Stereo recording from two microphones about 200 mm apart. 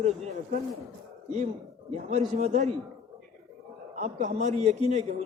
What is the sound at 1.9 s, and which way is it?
Speech, 35° right (ahead or behind).